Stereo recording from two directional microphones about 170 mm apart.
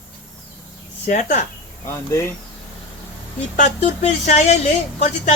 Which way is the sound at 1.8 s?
15° left (ahead or behind).